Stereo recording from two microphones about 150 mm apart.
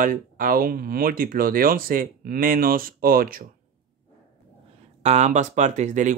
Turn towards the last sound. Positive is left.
turn(degrees=-55)  # may be behind; listen again after turning